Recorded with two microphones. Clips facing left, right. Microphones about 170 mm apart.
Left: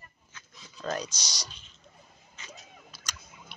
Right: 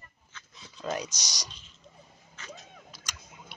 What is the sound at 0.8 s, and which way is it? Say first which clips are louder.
Speech: even; 20° right (ahead or behind).